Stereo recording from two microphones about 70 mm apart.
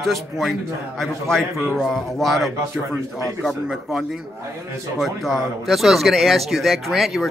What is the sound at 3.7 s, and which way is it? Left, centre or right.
Speech, centre.